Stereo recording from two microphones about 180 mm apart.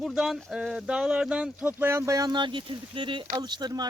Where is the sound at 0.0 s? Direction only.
5° right (ahead or behind).